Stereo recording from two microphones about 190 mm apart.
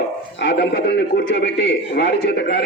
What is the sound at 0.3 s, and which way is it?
A man's voice, 65° left (ahead or behind).